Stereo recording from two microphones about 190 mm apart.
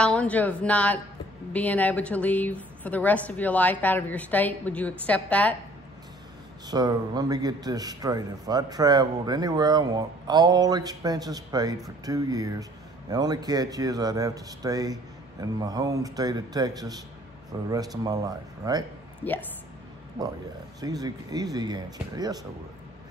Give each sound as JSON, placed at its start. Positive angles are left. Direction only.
{"t": 0.0, "sound": "a woman's voice", "side_deg": 5}
{"t": 6.7, "sound": "a man's voice", "side_deg": -20}
{"t": 19.2, "sound": "a woman's voice", "side_deg": 10}
{"t": 20.8, "sound": "a man's voice", "side_deg": -20}